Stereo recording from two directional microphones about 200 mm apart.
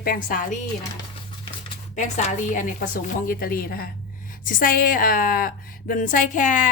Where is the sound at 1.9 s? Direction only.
35° left (ahead or behind).